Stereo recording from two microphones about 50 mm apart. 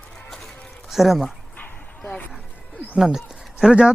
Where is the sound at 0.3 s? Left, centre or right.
Centre.